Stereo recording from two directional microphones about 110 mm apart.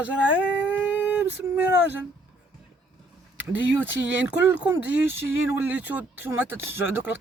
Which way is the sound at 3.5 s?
15° right (ahead or behind).